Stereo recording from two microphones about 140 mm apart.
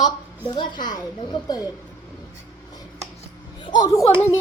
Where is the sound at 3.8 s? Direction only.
20° left (ahead or behind).